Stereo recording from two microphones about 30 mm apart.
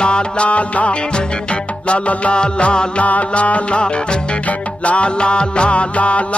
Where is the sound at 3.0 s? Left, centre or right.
Left.